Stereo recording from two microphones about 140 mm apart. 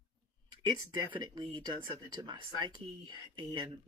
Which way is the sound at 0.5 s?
30° right (ahead or behind).